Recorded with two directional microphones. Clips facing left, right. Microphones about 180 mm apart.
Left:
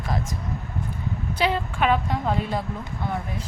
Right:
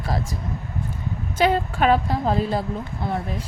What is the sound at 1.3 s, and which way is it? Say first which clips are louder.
Speech: right 5 dB; 45° right (ahead or behind).